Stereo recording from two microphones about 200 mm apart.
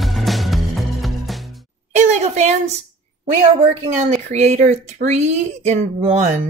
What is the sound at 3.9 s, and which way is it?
Speech, 35° right (ahead or behind).